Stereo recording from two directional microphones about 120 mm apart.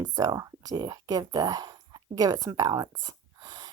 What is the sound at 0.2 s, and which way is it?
A woman's voice, 30° right (ahead or behind).